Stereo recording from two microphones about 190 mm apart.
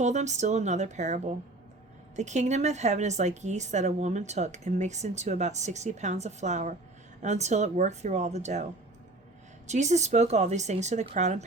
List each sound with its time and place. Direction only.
0.0 s a woman's voice: 40° right (ahead or behind)
9.6 s a woman's voice: 35° right (ahead or behind)